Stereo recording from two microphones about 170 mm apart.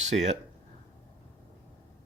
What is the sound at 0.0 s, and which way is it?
Speech, 40° right (ahead or behind).